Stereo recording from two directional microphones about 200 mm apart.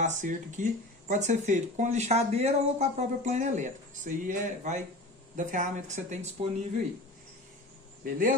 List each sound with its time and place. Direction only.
0.0 s speech: 40° right (ahead or behind)
8.0 s speech: 45° right (ahead or behind)